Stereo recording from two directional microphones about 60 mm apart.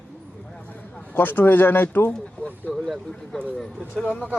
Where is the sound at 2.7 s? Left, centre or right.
Centre.